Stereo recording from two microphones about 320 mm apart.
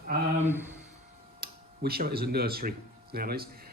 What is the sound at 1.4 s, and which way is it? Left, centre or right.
Speech, right.